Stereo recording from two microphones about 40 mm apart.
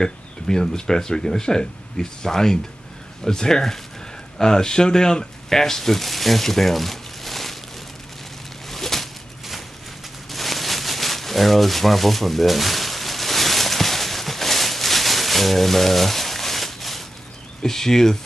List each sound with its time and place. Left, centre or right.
0.0 s speech: centre
8.6 s a sound: centre
17.6 s speech: centre